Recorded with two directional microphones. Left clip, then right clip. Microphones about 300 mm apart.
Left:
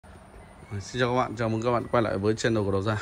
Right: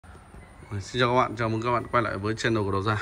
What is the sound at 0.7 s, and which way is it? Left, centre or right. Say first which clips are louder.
Speech: right 2 dB; centre.